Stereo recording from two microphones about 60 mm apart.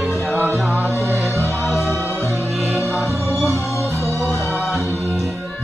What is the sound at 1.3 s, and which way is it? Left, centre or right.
Music, right.